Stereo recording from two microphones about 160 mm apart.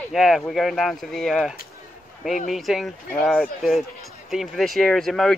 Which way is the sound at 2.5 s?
Centre (ahead or behind).